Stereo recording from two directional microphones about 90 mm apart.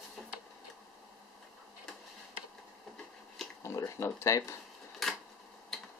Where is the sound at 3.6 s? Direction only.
30° left (ahead or behind).